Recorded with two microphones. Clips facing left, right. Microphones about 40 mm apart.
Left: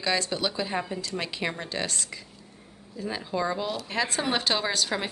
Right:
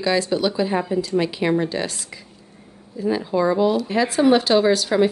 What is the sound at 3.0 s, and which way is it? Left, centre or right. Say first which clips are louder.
Speech: right 9 dB; centre.